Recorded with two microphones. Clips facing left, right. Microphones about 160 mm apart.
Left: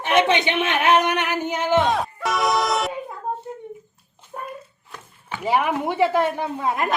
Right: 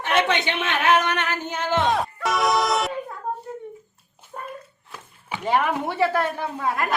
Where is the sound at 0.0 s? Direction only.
15° left (ahead or behind).